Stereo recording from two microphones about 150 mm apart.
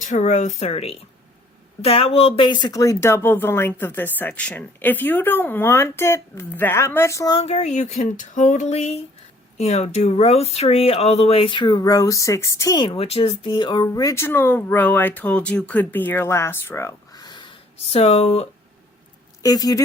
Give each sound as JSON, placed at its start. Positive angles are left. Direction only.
{"t": 0.0, "sound": "speech", "side_deg": 55}
{"t": 7.3, "sound": "speech", "side_deg": 45}
{"t": 13.0, "sound": "speech", "side_deg": 40}
{"t": 19.4, "sound": "a woman's voice", "side_deg": 25}